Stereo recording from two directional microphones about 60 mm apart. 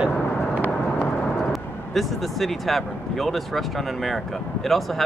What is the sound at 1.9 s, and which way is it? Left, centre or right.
Speech, centre.